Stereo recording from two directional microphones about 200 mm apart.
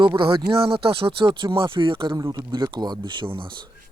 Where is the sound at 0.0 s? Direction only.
25° right (ahead or behind).